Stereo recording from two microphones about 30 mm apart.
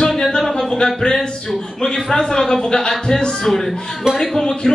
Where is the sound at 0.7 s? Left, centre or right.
Left; by 4.4 s centre.